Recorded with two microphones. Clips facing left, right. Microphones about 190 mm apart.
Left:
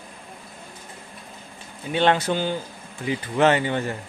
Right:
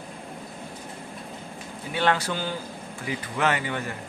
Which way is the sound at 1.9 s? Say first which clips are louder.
Left 4 dB; 25° left (ahead or behind).